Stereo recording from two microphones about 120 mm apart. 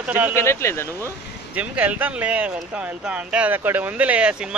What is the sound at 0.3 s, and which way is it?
Speech, 20° left (ahead or behind).